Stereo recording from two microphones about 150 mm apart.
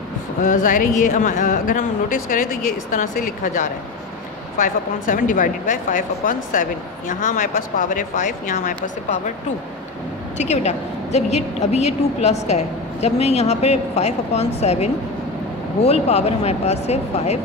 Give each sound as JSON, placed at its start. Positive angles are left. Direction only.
{"t": 0.4, "sound": "a woman's voice", "side_deg": 60}
{"t": 10.3, "sound": "a woman's voice", "side_deg": 50}